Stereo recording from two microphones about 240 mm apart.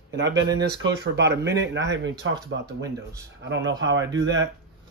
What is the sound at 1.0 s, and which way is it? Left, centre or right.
Speech, right.